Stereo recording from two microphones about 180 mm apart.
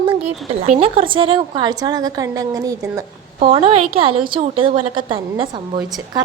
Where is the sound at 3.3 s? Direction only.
35° right (ahead or behind).